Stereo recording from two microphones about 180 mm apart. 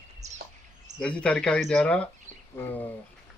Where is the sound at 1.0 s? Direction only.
5° left (ahead or behind).